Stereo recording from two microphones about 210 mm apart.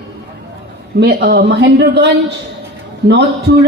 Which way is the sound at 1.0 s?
55° right (ahead or behind).